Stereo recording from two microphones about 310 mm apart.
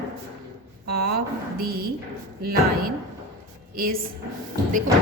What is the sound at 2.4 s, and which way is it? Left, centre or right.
A woman's voice, right.